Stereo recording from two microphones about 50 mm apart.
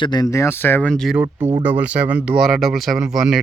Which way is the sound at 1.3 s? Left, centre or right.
Right.